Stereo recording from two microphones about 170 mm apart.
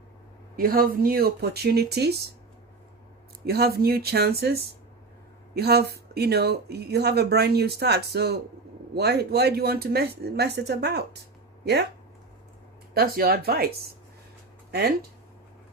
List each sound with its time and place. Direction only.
0.5 s speech: 60° right (ahead or behind)
3.4 s speech: 65° right (ahead or behind)
12.9 s speech: 60° right (ahead or behind)